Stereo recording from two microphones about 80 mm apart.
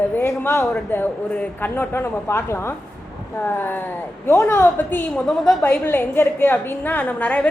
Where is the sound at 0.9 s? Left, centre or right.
Left.